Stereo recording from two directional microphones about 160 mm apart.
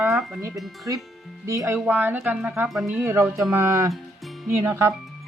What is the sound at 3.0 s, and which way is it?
Speech, 15° right (ahead or behind).